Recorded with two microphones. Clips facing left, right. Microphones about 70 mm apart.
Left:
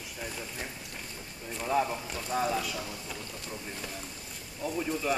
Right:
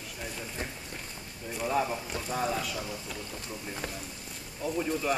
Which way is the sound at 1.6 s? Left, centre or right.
Centre.